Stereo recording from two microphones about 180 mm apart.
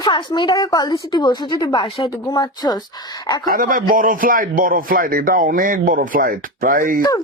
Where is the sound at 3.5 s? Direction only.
50° right (ahead or behind).